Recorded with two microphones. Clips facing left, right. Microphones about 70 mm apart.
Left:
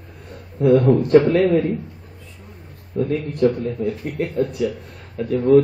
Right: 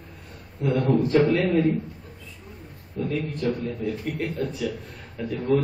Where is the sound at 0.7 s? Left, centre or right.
Left.